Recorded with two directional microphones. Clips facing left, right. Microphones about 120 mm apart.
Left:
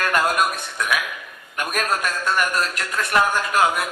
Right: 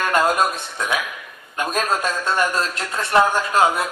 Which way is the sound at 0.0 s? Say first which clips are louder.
Right 2 dB; 25° right (ahead or behind).